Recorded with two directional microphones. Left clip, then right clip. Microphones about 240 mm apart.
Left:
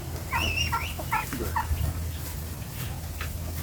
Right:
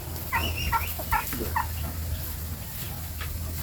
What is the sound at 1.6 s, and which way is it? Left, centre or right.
Dog, right.